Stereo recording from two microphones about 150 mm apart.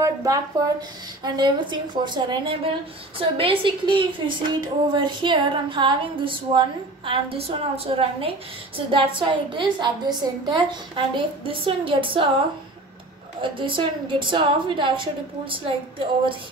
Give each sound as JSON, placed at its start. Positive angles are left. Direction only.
{"t": 0.0, "sound": "a woman's voice", "side_deg": -20}
{"t": 13.4, "sound": "a woman's voice", "side_deg": -35}